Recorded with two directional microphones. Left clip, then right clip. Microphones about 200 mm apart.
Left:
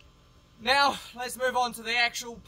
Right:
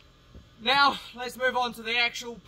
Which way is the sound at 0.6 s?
20° left (ahead or behind).